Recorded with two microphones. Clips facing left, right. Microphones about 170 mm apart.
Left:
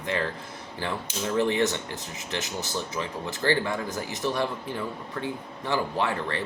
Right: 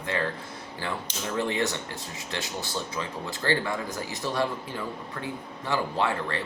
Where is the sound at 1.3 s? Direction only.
20° left (ahead or behind).